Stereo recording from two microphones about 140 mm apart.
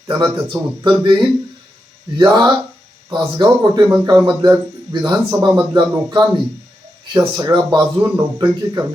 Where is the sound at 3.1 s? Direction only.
35° right (ahead or behind).